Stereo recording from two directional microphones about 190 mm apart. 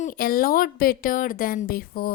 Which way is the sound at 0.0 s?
50° left (ahead or behind).